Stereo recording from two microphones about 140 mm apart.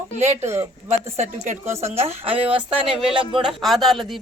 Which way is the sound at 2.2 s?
40° right (ahead or behind).